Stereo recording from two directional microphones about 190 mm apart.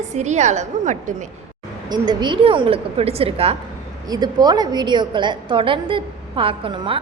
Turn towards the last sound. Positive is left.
turn(degrees=-25)  # may be behind; listen again after turning